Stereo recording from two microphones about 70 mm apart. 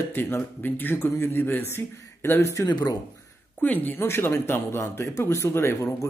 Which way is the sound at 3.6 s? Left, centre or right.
Left.